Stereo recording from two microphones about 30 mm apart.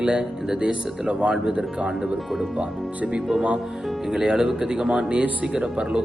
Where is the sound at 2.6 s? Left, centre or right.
Right.